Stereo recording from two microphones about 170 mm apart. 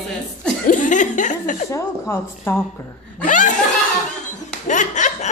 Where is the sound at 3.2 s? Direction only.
45° left (ahead or behind).